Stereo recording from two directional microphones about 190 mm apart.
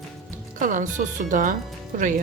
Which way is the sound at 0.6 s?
45° right (ahead or behind).